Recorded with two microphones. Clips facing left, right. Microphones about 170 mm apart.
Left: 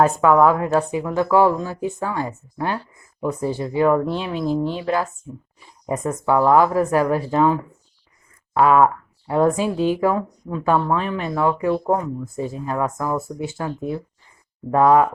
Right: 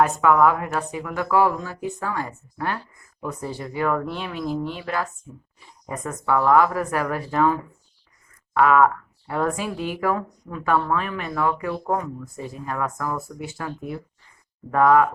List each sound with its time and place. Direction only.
0.0 s speech: 30° left (ahead or behind)